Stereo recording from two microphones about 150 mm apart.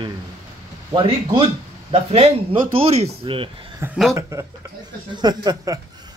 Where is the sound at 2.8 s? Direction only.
40° right (ahead or behind).